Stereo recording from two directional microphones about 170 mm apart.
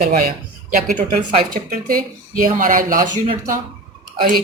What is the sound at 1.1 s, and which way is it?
Speech, 40° right (ahead or behind).